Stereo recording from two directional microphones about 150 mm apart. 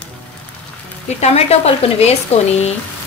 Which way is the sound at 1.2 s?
45° left (ahead or behind).